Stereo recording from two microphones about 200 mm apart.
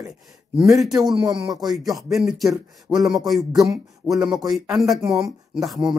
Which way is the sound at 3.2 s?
Centre (ahead or behind).